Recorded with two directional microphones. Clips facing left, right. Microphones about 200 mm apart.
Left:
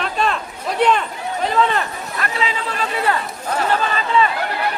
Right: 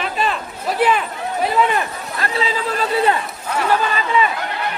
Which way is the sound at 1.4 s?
15° right (ahead or behind).